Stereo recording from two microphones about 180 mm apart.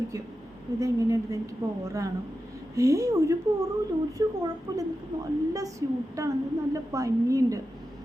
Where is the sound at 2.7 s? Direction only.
15° right (ahead or behind).